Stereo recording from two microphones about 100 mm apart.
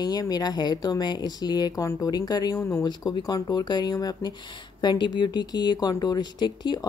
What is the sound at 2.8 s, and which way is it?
Speech, 45° left (ahead or behind).